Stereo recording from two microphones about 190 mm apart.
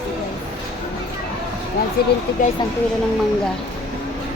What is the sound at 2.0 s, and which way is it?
Speech, 55° left (ahead or behind).